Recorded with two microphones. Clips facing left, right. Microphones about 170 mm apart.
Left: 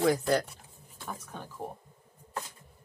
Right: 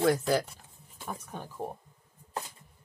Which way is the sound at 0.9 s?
15° right (ahead or behind).